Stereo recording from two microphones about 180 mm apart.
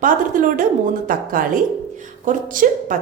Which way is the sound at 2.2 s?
50° right (ahead or behind).